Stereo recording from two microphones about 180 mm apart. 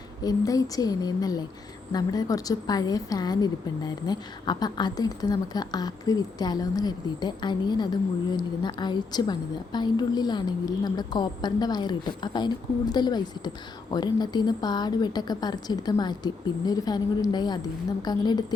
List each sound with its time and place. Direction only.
0.2 s a woman's voice: 20° left (ahead or behind)